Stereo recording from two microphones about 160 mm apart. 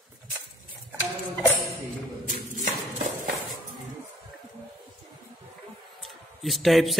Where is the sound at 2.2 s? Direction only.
50° right (ahead or behind).